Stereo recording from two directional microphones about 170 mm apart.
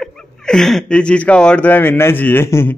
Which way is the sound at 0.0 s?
Centre (ahead or behind).